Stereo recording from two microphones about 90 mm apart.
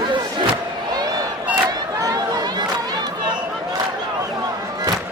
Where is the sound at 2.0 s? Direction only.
45° right (ahead or behind).